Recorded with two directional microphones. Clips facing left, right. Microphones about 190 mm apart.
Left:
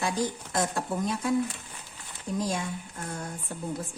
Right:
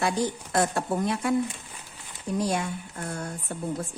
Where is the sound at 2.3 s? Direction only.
65° right (ahead or behind).